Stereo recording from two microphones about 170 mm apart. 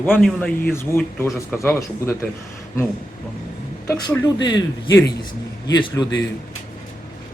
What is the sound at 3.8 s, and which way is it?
Speech, 20° left (ahead or behind).